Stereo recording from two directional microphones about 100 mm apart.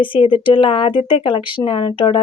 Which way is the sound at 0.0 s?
60° left (ahead or behind).